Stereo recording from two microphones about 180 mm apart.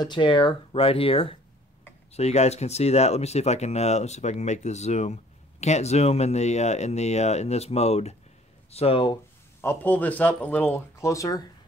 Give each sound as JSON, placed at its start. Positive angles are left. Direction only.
{"t": 0.0, "sound": "speech", "side_deg": 25}
{"t": 9.6, "sound": "speech", "side_deg": 10}